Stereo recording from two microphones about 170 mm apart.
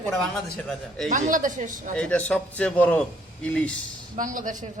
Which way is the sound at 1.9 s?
5° left (ahead or behind).